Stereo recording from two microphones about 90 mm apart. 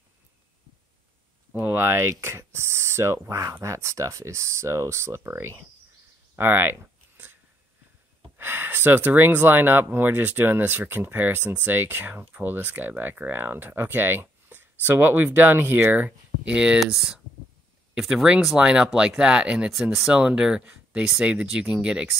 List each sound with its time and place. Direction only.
1.5 s speech: 20° right (ahead or behind)
6.3 s a sound: 25° right (ahead or behind)
8.4 s speech: 25° right (ahead or behind); by 22.1 s 10° right (ahead or behind)